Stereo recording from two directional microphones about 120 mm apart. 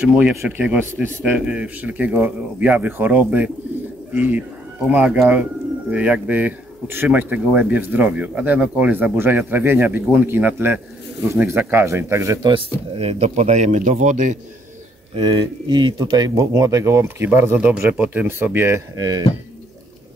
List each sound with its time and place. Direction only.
0.0 s speech: 10° right (ahead or behind)
12.4 s speech: 55° right (ahead or behind); by 14.4 s 90° right
15.1 s speech: 40° right (ahead or behind); by 18.8 s 20° right (ahead or behind)
18.9 s speech: 30° right (ahead or behind)